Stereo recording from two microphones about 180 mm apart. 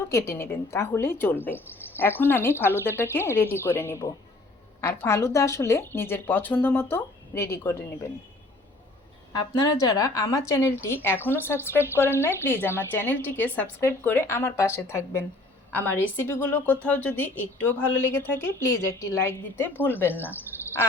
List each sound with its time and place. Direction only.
0.1 s a woman's voice: 15° left (ahead or behind)
9.6 s a woman's voice: 20° left (ahead or behind)
20.5 s a sound: 15° left (ahead or behind)